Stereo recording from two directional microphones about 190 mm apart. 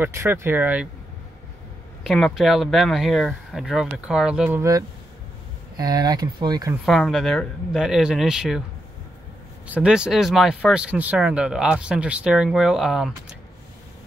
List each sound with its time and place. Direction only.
0.0 s speech: 10° right (ahead or behind)
2.0 s speech: centre (ahead or behind); by 6.7 s 20° right (ahead or behind)
6.9 s speech: centre (ahead or behind)
9.7 s speech: 5° right (ahead or behind)